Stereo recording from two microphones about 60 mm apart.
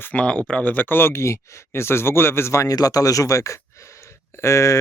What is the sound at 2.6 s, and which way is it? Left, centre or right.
Speech, left.